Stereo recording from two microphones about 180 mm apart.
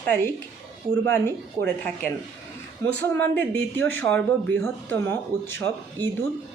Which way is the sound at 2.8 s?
15° left (ahead or behind).